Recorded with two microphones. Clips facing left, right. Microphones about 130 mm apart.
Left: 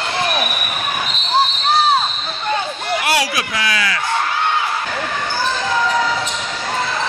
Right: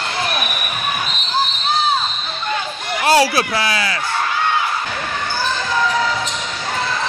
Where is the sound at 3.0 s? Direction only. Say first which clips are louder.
Right 8 dB; 30° right (ahead or behind).